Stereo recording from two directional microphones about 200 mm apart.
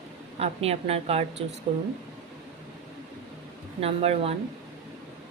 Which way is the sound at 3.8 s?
30° right (ahead or behind).